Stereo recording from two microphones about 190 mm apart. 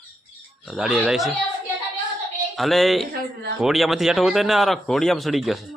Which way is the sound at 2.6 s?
Centre (ahead or behind).